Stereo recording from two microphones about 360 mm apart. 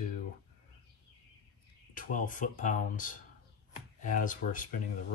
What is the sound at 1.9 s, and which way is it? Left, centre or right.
Speech, left.